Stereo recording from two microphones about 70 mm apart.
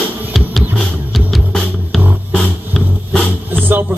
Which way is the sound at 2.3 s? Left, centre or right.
Centre.